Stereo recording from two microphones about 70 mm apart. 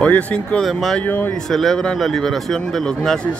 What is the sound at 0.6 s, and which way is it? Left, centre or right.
Speech, centre.